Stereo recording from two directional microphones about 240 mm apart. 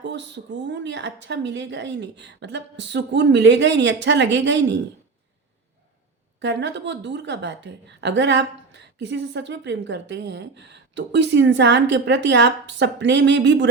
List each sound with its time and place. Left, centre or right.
0.0 s a woman's voice: right
6.4 s a woman's voice: right